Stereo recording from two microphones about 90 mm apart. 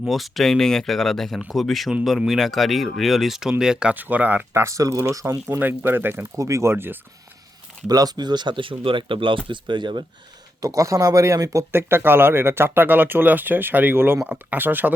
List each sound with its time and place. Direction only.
0.0 s speech: centre (ahead or behind); by 4.6 s 20° right (ahead or behind)
4.6 s speech: 40° right (ahead or behind)
5.5 s speech: 20° right (ahead or behind)
6.3 s speech: 35° right (ahead or behind)
7.9 s speech: 45° right (ahead or behind)
10.6 s speech: 40° right (ahead or behind)
11.7 s speech: 25° right (ahead or behind)